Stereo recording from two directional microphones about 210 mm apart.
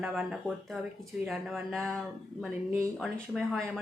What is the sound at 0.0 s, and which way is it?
Speech, 5° right (ahead or behind).